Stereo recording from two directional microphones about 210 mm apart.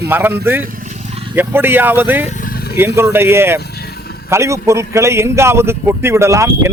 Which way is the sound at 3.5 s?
50° left (ahead or behind).